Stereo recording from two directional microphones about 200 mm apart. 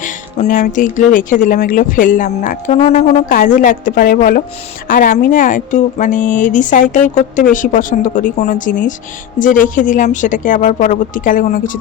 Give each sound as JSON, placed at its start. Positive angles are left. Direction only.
{"t": 0.0, "sound": "speech", "side_deg": 40}